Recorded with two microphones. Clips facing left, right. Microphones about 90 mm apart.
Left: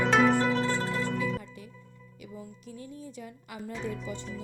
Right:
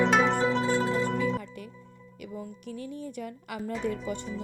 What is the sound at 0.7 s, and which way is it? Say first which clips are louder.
Zither: right 4 dB; 10° right (ahead or behind).